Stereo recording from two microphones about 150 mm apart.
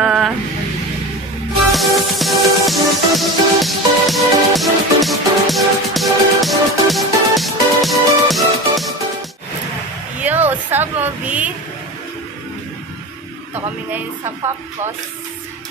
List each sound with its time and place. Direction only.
0.0 s vehicle: 5° right (ahead or behind)
1.7 s music: centre (ahead or behind)
10.1 s a sound: 10° right (ahead or behind)
13.9 s speech: 15° right (ahead or behind)